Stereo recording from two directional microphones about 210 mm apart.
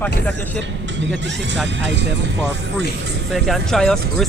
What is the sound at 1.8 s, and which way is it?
Speech, 55° right (ahead or behind).